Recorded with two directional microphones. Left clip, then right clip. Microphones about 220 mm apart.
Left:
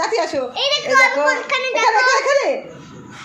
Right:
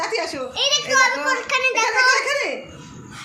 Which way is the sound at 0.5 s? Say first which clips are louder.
Left 2 dB; 25° right (ahead or behind).